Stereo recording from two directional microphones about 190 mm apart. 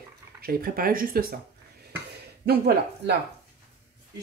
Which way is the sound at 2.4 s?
55° right (ahead or behind).